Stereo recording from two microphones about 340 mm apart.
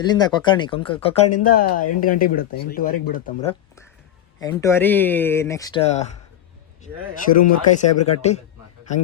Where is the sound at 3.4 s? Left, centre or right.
Centre.